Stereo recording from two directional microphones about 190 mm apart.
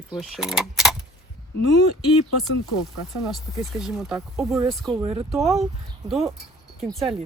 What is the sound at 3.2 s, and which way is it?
Speech, centre (ahead or behind).